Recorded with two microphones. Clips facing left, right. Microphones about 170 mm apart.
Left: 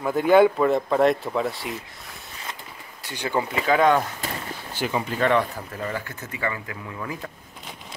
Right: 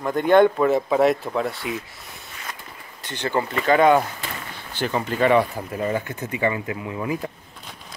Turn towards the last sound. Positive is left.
turn(degrees=-20)  # may be behind; listen again after turning